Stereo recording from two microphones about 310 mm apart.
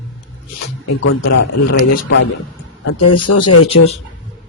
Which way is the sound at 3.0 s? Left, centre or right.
Left.